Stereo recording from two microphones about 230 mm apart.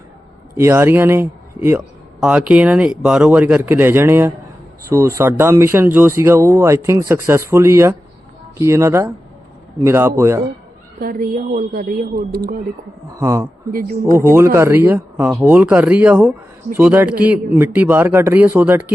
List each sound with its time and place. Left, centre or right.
0.5 s speech: centre
11.0 s a woman's voice: right
13.1 s speech: centre